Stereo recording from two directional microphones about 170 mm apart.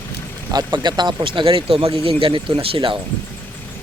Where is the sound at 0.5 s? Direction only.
25° right (ahead or behind).